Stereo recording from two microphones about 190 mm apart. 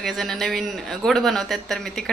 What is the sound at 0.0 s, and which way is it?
Speech, centre (ahead or behind).